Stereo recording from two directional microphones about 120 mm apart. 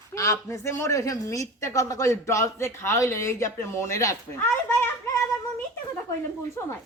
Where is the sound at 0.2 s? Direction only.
25° left (ahead or behind).